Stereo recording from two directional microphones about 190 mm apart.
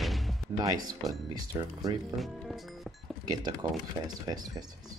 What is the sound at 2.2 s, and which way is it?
Music, centre (ahead or behind).